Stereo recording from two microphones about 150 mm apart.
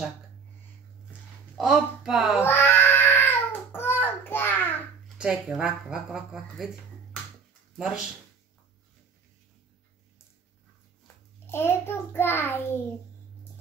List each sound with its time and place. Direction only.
1.6 s speech: centre (ahead or behind)
2.4 s cat: 15° left (ahead or behind)
5.2 s speech: 5° right (ahead or behind)
7.7 s speech: 5° right (ahead or behind)
11.4 s a child's voice: 15° left (ahead or behind)